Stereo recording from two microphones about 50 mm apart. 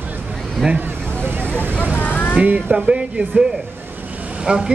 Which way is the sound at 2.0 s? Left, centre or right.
Left.